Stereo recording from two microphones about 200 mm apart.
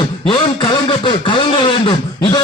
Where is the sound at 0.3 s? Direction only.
25° left (ahead or behind).